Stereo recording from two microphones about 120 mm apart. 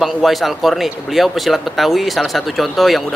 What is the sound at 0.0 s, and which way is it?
Speech, centre (ahead or behind).